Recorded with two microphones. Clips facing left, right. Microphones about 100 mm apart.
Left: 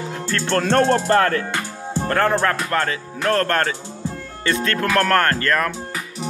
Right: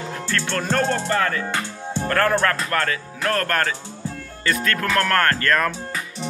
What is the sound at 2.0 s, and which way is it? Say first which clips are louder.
Speech: left 1 dB; 20° left (ahead or behind).